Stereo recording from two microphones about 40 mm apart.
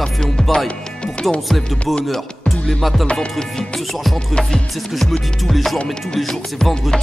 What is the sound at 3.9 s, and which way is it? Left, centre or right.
Music, centre.